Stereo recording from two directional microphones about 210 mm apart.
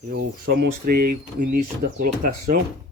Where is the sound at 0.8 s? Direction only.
45° right (ahead or behind).